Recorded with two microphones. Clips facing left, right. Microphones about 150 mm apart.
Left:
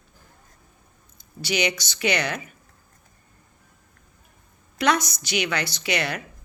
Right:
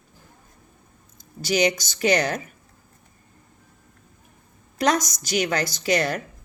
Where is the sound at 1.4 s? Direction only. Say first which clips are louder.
Right 4 dB; 40° right (ahead or behind).